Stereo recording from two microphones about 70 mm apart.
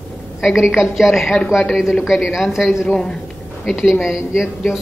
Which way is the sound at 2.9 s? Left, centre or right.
Centre.